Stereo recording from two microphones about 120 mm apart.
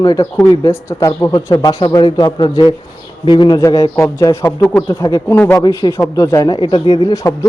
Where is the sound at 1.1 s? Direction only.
20° left (ahead or behind).